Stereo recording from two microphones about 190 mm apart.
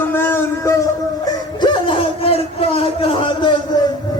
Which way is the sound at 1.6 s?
30° left (ahead or behind).